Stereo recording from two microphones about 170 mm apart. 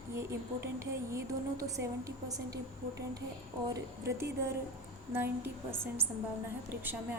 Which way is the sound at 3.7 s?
15° right (ahead or behind).